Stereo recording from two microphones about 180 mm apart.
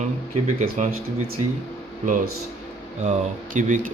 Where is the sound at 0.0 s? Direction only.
40° right (ahead or behind).